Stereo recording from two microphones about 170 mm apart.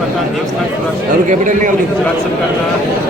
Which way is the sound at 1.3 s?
50° right (ahead or behind).